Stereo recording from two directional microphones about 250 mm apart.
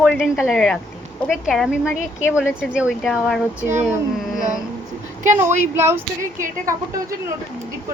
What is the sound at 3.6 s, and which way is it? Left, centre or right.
Speech, right.